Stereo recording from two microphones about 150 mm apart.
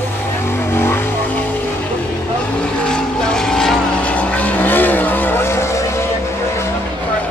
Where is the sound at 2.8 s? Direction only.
5° left (ahead or behind).